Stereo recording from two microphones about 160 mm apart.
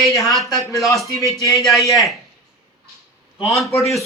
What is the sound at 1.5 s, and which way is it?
Speech, centre (ahead or behind).